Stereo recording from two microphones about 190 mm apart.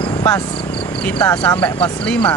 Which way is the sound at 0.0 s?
20° left (ahead or behind).